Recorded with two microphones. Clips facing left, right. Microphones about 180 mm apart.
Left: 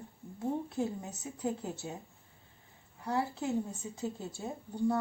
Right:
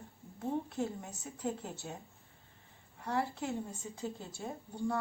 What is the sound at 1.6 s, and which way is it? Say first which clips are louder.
Speech: left 4 dB; 5° left (ahead or behind).